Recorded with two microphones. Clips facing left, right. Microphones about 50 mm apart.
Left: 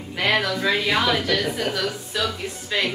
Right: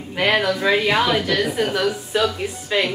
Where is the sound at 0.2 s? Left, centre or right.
Centre.